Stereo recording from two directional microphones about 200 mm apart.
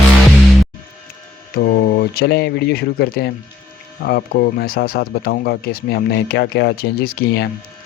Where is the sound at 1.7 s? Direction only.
50° left (ahead or behind).